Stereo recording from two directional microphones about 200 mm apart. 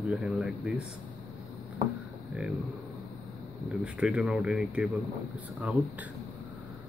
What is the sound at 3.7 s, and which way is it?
Speech, 5° right (ahead or behind).